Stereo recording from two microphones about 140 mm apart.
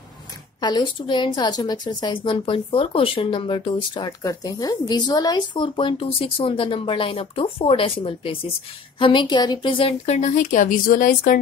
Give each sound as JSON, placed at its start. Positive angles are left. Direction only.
{"t": 0.6, "sound": "a woman's voice", "side_deg": 30}
{"t": 10.0, "sound": "speech", "side_deg": 55}